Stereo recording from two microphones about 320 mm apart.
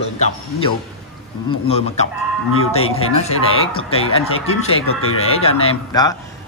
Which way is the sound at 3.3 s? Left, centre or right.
Left.